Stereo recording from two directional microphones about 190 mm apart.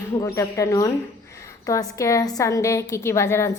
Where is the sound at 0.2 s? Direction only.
15° left (ahead or behind).